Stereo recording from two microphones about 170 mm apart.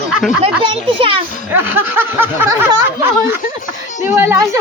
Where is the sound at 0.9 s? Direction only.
30° right (ahead or behind).